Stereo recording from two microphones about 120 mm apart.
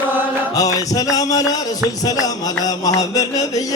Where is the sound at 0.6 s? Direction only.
30° left (ahead or behind).